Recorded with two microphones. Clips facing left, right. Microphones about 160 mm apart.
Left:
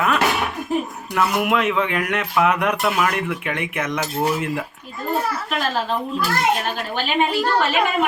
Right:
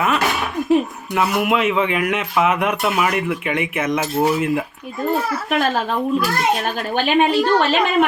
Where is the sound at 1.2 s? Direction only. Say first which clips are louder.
Right 1 dB; centre (ahead or behind).